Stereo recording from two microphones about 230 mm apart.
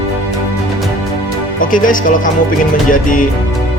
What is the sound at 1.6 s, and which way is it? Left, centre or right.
A man's voice, left.